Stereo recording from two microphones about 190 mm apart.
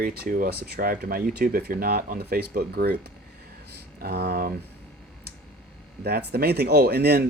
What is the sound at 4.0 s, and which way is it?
Speech, 60° right (ahead or behind).